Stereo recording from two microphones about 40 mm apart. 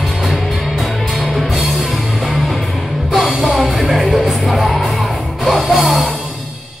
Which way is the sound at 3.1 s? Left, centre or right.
Centre.